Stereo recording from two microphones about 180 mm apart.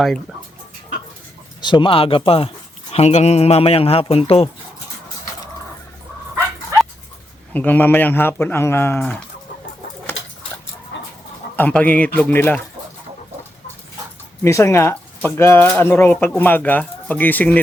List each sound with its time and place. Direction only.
1.6 s speech: 25° left (ahead or behind)
7.5 s speech: 10° left (ahead or behind)
10.9 s chicken: 90° left
11.5 s speech: 10° left (ahead or behind)
14.4 s speech: 15° left (ahead or behind)